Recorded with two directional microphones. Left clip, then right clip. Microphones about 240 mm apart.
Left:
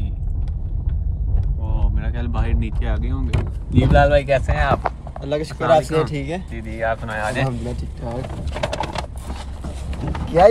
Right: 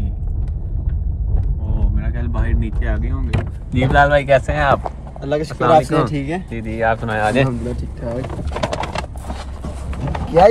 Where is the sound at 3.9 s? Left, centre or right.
Centre.